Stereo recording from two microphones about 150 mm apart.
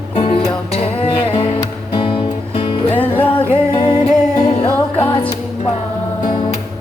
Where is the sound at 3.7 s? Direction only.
35° left (ahead or behind).